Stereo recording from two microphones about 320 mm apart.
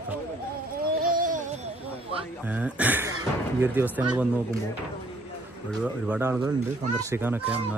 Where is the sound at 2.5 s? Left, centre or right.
Centre.